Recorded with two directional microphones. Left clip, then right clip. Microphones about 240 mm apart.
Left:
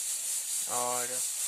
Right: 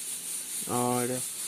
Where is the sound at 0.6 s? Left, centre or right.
Centre.